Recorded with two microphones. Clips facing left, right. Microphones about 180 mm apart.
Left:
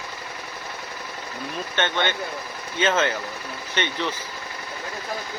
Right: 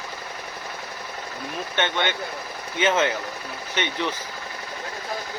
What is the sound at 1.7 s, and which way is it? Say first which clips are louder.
Speech: even; 15° right (ahead or behind).